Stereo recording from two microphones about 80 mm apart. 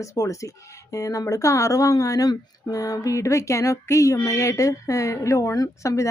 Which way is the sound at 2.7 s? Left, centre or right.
Left.